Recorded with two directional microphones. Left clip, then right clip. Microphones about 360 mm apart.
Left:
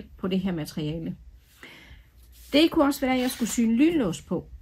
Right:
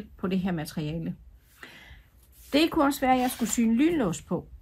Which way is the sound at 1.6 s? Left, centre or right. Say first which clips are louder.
Even; centre.